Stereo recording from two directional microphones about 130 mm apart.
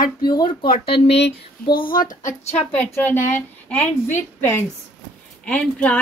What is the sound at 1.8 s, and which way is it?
Speech, 90° left.